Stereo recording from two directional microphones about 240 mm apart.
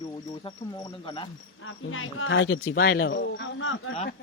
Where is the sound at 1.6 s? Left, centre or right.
Left.